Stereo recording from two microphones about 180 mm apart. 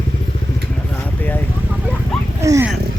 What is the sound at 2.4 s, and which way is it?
Speech, 15° right (ahead or behind).